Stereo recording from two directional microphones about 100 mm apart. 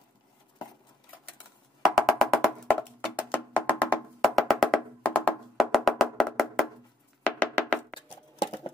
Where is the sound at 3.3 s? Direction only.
15° left (ahead or behind).